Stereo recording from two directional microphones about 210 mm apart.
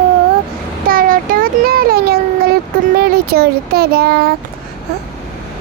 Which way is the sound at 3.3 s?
50° right (ahead or behind).